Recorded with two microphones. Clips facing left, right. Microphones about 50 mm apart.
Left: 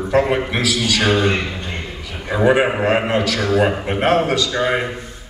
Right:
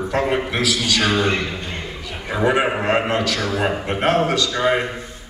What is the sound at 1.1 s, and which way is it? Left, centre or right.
Speech, left.